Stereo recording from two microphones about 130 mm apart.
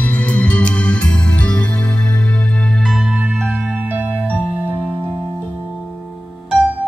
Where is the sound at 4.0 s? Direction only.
15° right (ahead or behind).